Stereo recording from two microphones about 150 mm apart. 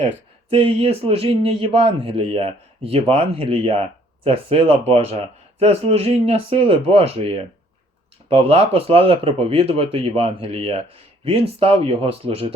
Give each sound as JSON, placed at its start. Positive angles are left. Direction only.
{"t": 0.5, "sound": "a man's voice", "side_deg": -40}